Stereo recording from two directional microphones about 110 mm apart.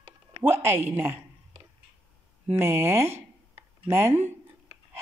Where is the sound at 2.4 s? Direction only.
20° right (ahead or behind).